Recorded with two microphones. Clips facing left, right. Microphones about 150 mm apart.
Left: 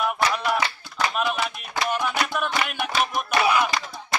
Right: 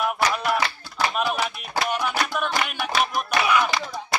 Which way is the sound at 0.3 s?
Centre (ahead or behind).